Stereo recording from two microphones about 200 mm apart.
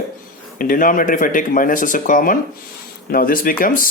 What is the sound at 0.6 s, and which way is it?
Speech, 40° left (ahead or behind).